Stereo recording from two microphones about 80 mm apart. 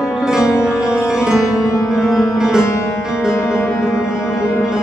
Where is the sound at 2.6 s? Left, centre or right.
Left.